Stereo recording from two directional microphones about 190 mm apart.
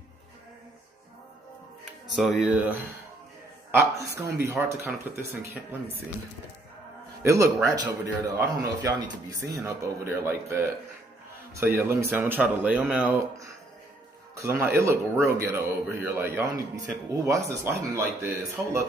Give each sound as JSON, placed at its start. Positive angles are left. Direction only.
{"t": 2.1, "sound": "speech", "side_deg": 0}
{"t": 3.7, "sound": "speech", "side_deg": -15}
{"t": 7.2, "sound": "speech", "side_deg": -15}